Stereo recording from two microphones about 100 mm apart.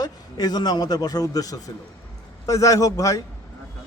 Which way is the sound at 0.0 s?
40° left (ahead or behind).